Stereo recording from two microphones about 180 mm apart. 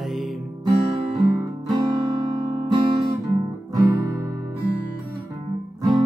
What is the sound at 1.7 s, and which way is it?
Music, 25° right (ahead or behind).